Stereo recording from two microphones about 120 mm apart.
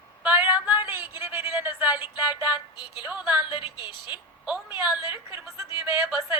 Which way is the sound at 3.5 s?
40° left (ahead or behind).